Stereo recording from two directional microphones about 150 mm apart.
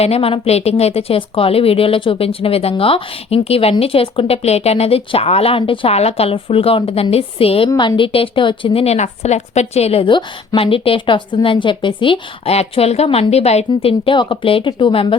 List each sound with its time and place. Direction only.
0.0 s speech: 40° left (ahead or behind)